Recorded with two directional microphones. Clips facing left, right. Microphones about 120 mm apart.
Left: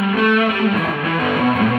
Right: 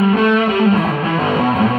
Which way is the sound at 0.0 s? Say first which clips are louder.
Right 3 dB; 30° right (ahead or behind).